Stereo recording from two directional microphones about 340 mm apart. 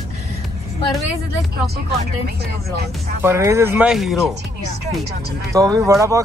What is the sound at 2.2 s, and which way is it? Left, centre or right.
Speech, right.